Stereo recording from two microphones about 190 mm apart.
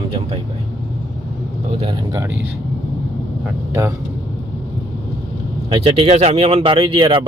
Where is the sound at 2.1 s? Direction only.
15° right (ahead or behind).